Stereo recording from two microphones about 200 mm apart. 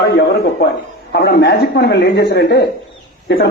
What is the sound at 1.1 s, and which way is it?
A man's voice, 55° left (ahead or behind).